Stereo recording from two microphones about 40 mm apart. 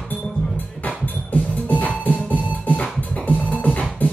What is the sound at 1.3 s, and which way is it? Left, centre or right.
Music, left.